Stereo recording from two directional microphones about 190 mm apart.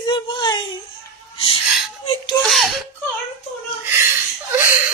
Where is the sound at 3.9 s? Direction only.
10° right (ahead or behind).